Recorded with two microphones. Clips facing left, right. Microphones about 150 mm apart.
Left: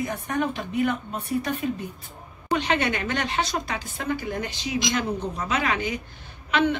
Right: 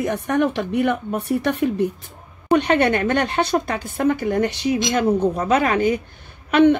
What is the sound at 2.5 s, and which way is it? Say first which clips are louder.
A woman's voice: right 8 dB; 55° right (ahead or behind).